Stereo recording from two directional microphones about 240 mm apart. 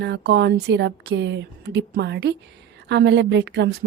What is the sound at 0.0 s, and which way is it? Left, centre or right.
A woman's voice, right.